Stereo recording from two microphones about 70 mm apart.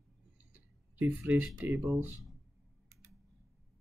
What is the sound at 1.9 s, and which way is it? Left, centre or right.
Speech, right.